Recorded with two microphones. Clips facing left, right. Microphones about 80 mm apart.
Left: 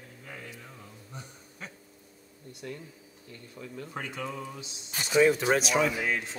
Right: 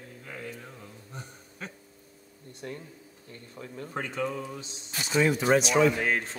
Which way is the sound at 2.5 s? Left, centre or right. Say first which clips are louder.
Right 1 dB; right.